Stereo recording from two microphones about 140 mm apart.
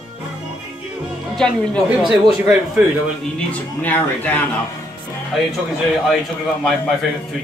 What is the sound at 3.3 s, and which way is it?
Speech, 10° left (ahead or behind).